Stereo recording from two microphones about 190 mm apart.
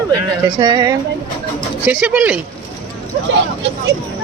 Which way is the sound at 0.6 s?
20° right (ahead or behind).